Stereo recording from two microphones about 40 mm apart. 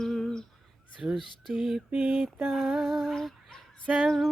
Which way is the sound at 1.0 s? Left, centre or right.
Right.